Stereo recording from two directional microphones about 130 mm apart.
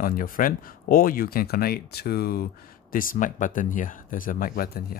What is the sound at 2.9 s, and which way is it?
Speech, 90° left.